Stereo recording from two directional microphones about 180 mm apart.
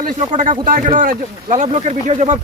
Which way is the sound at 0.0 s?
45° right (ahead or behind).